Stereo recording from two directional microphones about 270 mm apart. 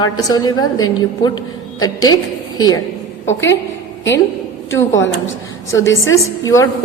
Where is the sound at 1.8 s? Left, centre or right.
Centre.